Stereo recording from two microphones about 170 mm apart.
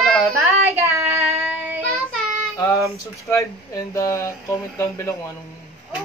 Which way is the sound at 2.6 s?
20° left (ahead or behind).